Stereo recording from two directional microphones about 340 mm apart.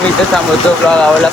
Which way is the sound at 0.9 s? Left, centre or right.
Centre.